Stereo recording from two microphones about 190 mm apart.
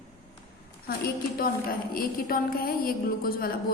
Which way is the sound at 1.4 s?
50° left (ahead or behind).